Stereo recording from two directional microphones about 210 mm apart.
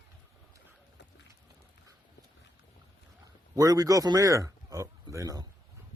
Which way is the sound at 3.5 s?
15° right (ahead or behind).